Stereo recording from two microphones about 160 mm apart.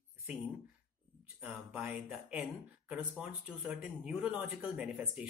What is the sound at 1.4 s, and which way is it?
Speech, 10° right (ahead or behind).